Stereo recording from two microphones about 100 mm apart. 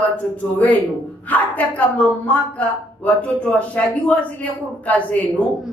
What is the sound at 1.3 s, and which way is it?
Speech, 15° left (ahead or behind).